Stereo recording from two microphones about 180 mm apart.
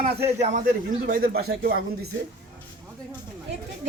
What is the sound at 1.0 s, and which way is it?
Speech, 55° right (ahead or behind).